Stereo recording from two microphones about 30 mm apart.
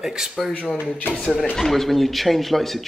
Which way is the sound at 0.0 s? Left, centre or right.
Centre.